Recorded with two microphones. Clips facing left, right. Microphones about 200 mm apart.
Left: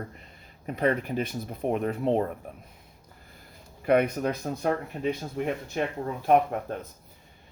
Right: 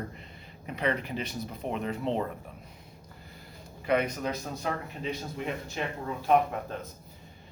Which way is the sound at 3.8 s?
55° left (ahead or behind).